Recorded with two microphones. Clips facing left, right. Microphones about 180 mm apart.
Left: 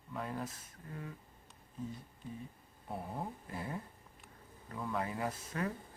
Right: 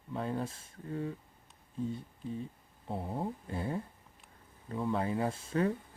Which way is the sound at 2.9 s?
25° right (ahead or behind).